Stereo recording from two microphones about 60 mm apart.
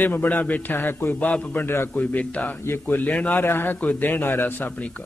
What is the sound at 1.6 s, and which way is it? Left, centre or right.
Speech, left.